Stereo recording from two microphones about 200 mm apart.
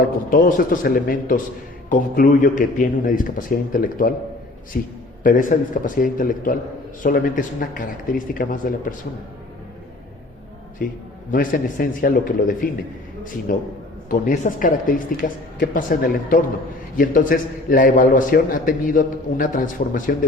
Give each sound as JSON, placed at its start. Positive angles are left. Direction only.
{"t": 0.0, "sound": "a man's voice", "side_deg": 45}
{"t": 11.3, "sound": "a man's voice", "side_deg": 45}